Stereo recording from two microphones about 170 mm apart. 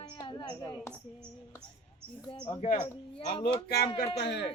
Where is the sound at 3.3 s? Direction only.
30° left (ahead or behind).